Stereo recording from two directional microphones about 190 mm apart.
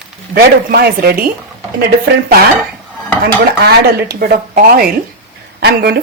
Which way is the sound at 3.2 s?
55° right (ahead or behind).